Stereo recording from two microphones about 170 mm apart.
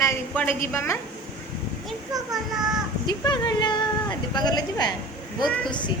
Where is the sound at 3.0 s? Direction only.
25° left (ahead or behind).